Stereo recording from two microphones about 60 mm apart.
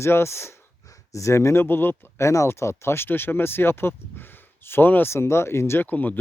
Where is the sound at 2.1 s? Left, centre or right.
Left.